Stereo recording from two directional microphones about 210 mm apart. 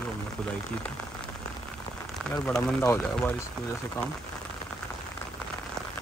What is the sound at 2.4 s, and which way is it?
Speech, 5° left (ahead or behind).